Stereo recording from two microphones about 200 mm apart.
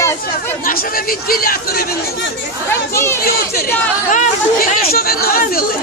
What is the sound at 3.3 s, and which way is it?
Speech, 50° left (ahead or behind).